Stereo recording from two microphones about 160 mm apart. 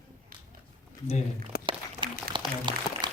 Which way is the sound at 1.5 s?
75° left (ahead or behind).